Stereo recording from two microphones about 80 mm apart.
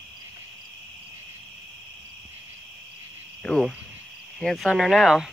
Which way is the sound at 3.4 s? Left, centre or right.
Centre.